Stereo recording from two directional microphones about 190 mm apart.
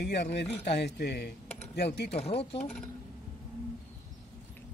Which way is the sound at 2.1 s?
30° left (ahead or behind).